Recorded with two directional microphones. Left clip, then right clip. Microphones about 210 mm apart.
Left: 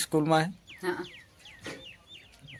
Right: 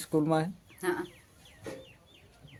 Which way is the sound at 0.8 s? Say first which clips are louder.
Right 1 dB; 20° right (ahead or behind).